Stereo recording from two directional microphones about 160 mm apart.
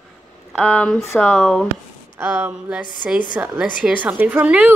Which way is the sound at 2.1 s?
10° right (ahead or behind).